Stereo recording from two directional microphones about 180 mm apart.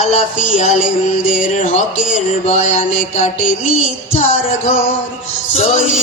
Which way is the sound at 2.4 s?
40° left (ahead or behind).